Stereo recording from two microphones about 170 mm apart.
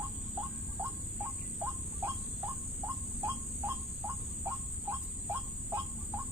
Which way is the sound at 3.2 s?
15° right (ahead or behind).